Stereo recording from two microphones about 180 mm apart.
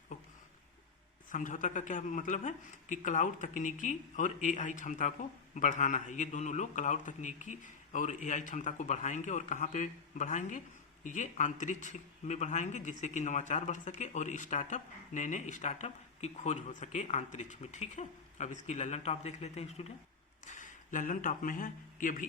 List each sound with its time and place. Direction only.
1.3 s a man's voice: 45° left (ahead or behind)